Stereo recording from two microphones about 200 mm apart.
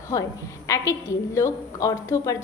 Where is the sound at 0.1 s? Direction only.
15° left (ahead or behind).